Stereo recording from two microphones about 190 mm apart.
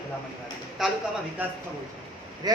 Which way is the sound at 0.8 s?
Centre (ahead or behind).